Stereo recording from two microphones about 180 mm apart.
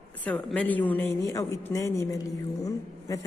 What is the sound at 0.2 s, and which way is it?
A woman's voice, 5° left (ahead or behind).